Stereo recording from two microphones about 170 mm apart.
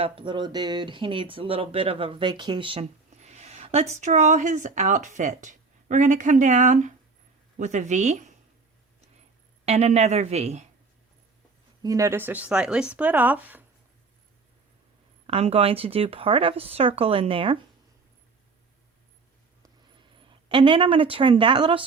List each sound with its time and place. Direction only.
0.0 s a woman's voice: 30° right (ahead or behind)
9.6 s speech: 40° right (ahead or behind)
11.8 s speech: 20° right (ahead or behind)
15.3 s speech: 35° right (ahead or behind)
20.1 s speech: 30° right (ahead or behind)